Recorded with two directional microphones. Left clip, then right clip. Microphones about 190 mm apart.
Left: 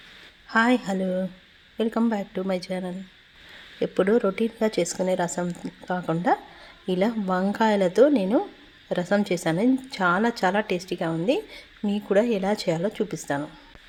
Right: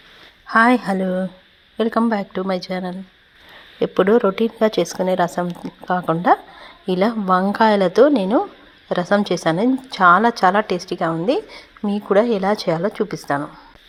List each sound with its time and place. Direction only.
0.4 s a woman's voice: 20° right (ahead or behind)